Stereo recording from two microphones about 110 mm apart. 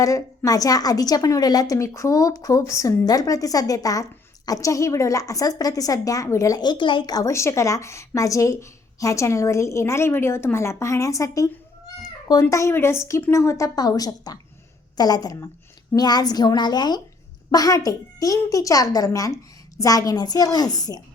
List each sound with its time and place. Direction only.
0.0 s a woman's voice: 30° left (ahead or behind)
6.6 s a woman's voice: 45° left (ahead or behind)